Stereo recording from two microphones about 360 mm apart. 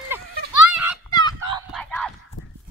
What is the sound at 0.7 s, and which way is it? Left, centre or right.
Children playing, centre.